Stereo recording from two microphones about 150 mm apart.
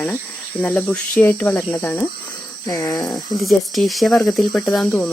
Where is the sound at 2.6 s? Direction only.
25° left (ahead or behind).